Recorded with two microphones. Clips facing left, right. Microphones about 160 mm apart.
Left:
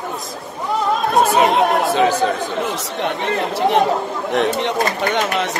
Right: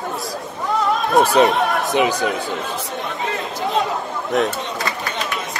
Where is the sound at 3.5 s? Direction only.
70° left (ahead or behind).